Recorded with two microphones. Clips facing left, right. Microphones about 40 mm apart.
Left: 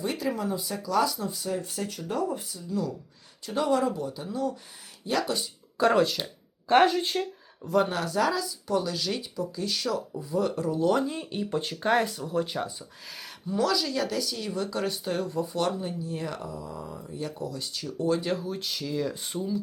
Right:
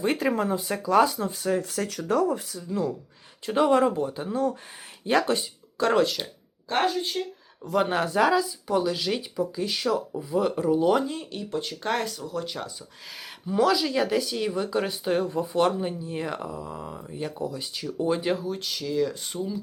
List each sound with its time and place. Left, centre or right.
0.0 s speech: right
1.5 s speech: right
2.6 s speech: right
5.7 s speech: centre
6.8 s speech: left
7.9 s speech: right
10.9 s speech: centre
11.2 s speech: centre
12.3 s speech: left
13.5 s speech: centre
18.3 s speech: centre